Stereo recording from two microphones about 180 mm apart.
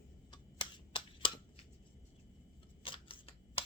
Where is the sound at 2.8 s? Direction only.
30° left (ahead or behind).